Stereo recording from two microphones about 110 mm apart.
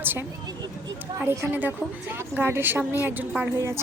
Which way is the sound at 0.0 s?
20° right (ahead or behind).